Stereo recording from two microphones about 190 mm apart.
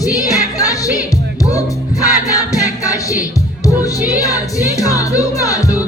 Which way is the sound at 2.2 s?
15° left (ahead or behind).